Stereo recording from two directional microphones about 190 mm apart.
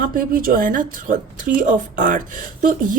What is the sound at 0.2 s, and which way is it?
Speech, 50° right (ahead or behind).